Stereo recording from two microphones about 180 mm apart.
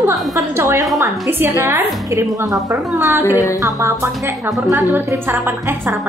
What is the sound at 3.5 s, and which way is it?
Speech, 15° right (ahead or behind).